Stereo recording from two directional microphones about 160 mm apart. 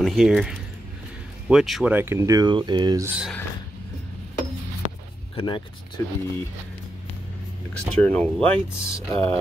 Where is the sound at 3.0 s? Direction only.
10° right (ahead or behind).